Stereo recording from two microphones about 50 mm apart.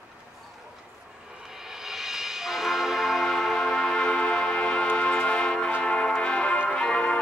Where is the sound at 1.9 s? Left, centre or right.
Centre.